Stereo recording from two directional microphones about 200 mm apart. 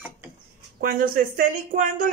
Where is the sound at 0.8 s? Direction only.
45° right (ahead or behind).